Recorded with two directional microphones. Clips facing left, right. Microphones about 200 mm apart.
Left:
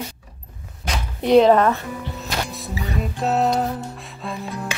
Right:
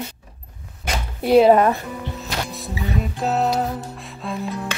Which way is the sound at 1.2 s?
5° right (ahead or behind).